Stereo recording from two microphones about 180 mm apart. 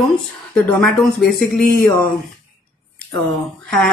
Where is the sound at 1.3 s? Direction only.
55° left (ahead or behind).